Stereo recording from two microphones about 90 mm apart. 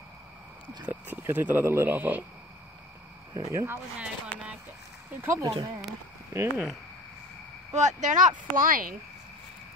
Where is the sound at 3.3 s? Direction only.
40° right (ahead or behind).